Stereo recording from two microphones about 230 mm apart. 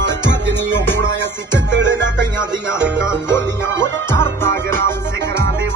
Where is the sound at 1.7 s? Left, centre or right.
Right.